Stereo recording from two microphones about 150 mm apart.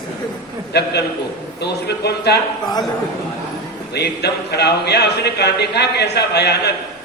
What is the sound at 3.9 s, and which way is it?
Speech, 90° left.